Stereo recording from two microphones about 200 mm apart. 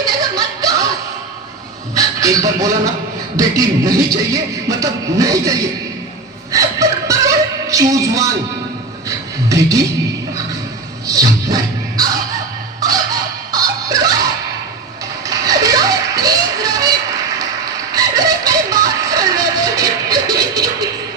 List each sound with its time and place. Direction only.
0.2 s a sound: 20° right (ahead or behind)
2.0 s speech: 15° right (ahead or behind)
6.5 s music: 15° right (ahead or behind)
9.0 s a sound: 15° right (ahead or behind)
11.0 s music: 15° right (ahead or behind)
15.3 s music: 15° right (ahead or behind)
17.9 s music: 15° right (ahead or behind)